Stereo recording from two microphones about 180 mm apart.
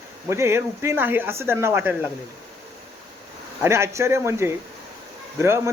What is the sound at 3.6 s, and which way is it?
Speech, 15° right (ahead or behind).